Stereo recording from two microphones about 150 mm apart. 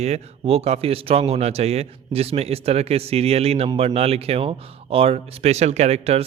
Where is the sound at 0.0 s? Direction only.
45° right (ahead or behind).